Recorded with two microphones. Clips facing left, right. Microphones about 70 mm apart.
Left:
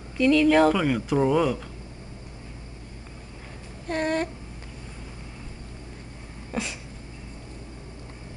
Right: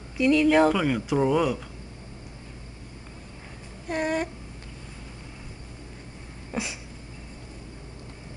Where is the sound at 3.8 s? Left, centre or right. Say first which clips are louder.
Left 1 dB; centre.